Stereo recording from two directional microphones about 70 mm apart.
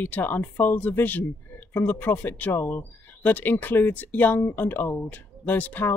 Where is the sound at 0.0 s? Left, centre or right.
Left.